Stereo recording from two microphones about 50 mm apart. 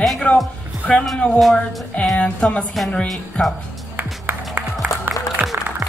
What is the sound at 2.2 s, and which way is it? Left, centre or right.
A woman's voice, left.